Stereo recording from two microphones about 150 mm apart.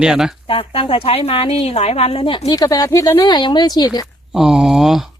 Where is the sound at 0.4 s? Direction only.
40° left (ahead or behind).